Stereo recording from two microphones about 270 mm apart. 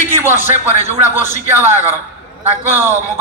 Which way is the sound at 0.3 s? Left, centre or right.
Left.